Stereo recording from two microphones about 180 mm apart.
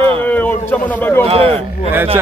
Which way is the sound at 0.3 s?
10° left (ahead or behind).